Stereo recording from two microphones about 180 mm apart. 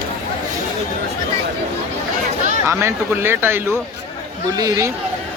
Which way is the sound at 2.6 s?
15° right (ahead or behind).